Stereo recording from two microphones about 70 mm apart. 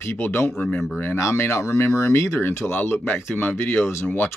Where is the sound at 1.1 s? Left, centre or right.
Left.